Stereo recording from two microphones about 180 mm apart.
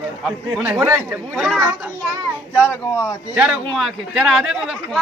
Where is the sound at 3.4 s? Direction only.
5° right (ahead or behind).